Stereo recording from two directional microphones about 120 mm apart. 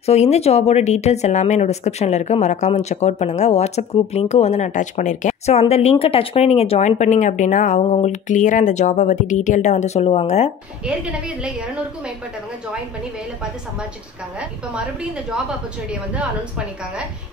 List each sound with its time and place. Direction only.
0.0 s speech: 65° left (ahead or behind)
10.9 s a woman's voice: 10° right (ahead or behind)
15.9 s a woman's voice: 10° right (ahead or behind)